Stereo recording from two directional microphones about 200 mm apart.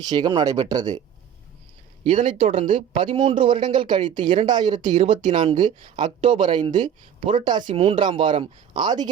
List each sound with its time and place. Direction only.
0.0 s speech: 20° right (ahead or behind)
2.0 s speech: 35° right (ahead or behind)